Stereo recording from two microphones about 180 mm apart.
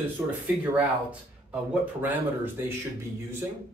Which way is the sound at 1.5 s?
10° right (ahead or behind).